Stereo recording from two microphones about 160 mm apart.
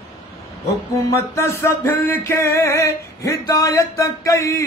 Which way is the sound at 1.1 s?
20° left (ahead or behind).